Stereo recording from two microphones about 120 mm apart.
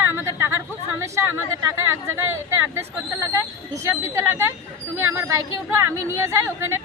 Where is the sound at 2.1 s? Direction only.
20° right (ahead or behind).